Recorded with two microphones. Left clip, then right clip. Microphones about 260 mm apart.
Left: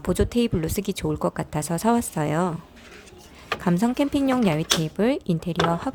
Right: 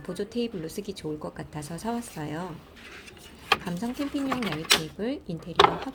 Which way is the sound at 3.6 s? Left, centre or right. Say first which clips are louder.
Left 10 dB; left.